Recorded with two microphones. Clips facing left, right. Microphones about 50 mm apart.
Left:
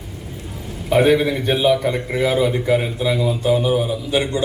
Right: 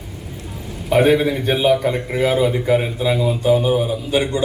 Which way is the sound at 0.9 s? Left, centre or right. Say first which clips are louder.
Even; centre.